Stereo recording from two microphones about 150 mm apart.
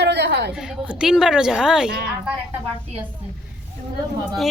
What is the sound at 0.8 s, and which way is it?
A woman's voice, 5° right (ahead or behind).